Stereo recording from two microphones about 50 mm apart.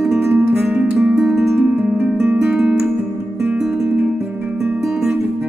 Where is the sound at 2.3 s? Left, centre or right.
Right.